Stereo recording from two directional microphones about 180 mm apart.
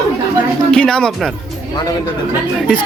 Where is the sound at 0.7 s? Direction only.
5° left (ahead or behind).